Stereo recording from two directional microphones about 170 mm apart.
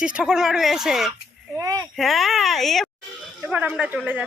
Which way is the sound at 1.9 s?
Centre (ahead or behind).